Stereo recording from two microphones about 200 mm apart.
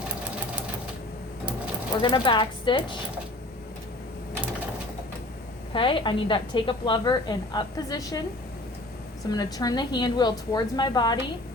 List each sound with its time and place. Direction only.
2.0 s a woman's voice: 25° left (ahead or behind)
5.7 s a woman's voice: 25° left (ahead or behind)
9.3 s a woman's voice: 20° left (ahead or behind)